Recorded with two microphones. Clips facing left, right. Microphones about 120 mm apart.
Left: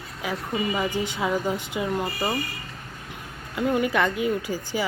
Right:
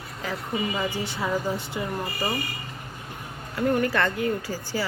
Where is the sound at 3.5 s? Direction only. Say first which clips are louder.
Even; 20° left (ahead or behind).